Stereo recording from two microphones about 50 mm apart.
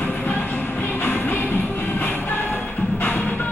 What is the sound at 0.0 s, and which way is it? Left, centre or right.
Music, left.